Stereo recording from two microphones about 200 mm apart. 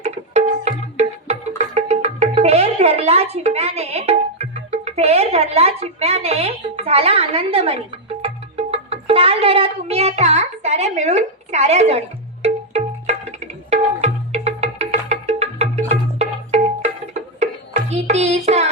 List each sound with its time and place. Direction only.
0.0 s music: 35° right (ahead or behind)